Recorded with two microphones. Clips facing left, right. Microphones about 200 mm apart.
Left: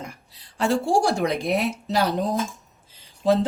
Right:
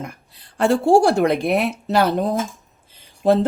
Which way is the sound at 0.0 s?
55° right (ahead or behind).